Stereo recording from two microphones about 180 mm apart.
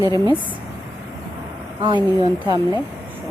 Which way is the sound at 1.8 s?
25° right (ahead or behind).